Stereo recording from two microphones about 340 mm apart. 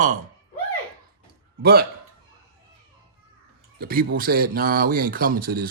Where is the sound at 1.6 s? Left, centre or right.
Right.